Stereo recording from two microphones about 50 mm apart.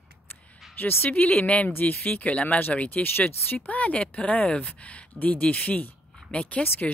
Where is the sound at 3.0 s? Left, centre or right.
Left.